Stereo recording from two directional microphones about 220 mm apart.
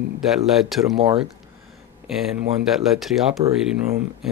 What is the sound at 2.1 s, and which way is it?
Speech, centre (ahead or behind).